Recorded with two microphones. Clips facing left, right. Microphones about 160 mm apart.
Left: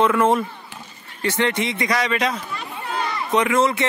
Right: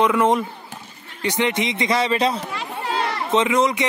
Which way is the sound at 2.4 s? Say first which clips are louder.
Right 3 dB; 85° right.